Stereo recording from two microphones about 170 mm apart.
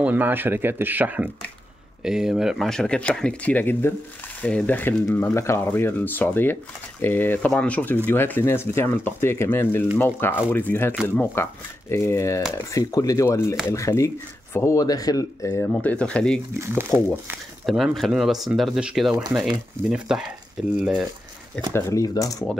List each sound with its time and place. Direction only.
0.0 s speech: 10° right (ahead or behind); by 15.7 s 20° left (ahead or behind)
15.7 s speech: 10° left (ahead or behind)
16.5 s speech: 15° right (ahead or behind)
17.6 s speech: centre (ahead or behind)
21.7 s speech: 20° left (ahead or behind)